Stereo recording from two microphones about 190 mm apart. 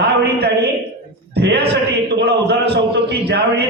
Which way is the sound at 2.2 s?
60° right (ahead or behind).